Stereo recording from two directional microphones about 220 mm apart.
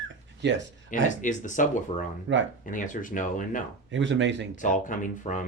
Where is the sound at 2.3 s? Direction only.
55° right (ahead or behind).